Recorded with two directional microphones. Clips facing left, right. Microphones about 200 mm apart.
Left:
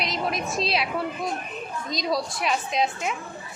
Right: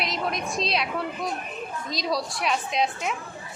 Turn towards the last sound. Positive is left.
turn(degrees=0)  # may be behind; listen again after turning